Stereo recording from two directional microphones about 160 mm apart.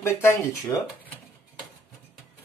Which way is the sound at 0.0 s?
15° left (ahead or behind).